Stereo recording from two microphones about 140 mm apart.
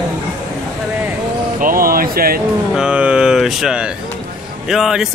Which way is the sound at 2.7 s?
5° right (ahead or behind).